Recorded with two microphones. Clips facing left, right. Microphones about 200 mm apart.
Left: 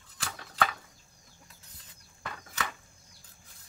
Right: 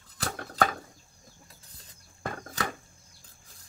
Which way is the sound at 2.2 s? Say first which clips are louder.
Right 5 dB; 45° right (ahead or behind).